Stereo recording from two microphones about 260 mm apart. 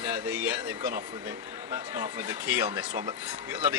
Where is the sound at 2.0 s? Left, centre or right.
Centre.